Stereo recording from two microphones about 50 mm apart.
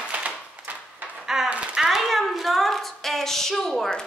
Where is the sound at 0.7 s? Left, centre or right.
Right.